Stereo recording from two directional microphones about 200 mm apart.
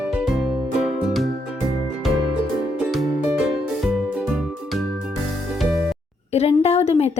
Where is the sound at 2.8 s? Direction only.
Centre (ahead or behind).